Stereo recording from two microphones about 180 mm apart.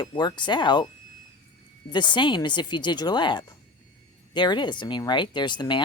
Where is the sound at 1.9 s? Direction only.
25° left (ahead or behind).